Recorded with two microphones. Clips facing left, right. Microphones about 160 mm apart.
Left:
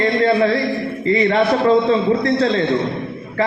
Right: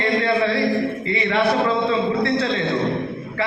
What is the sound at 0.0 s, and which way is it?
A man's voice, 40° left (ahead or behind).